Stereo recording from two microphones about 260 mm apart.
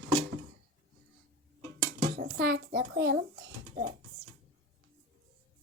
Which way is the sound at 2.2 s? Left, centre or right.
Right.